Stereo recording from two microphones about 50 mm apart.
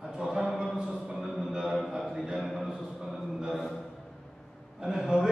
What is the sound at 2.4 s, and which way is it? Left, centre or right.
Speech, centre.